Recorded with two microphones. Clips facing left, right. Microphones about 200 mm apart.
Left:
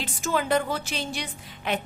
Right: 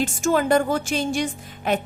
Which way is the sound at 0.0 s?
45° right (ahead or behind).